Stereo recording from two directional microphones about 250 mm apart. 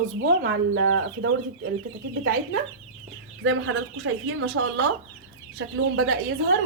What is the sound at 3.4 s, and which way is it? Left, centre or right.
Speech, right.